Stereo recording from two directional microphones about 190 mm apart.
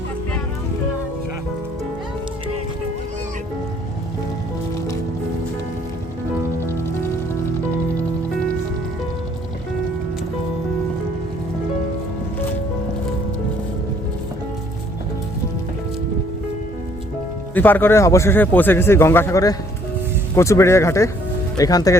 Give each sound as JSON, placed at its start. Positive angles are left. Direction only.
{"t": 17.5, "sound": "speech", "side_deg": 10}